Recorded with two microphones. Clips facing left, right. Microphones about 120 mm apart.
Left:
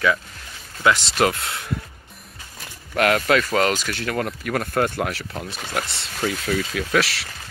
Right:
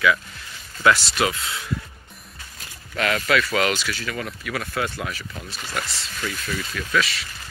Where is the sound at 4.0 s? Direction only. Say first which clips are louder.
Left 5 dB; 60° left (ahead or behind); by 7.3 s 75° left (ahead or behind).